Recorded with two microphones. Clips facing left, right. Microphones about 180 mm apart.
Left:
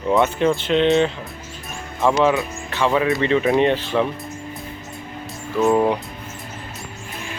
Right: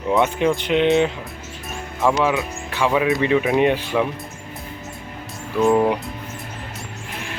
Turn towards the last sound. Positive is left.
turn(degrees=0)  # may be behind; listen again after turning